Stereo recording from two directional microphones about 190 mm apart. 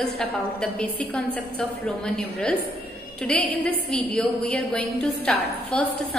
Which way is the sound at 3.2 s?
10° left (ahead or behind).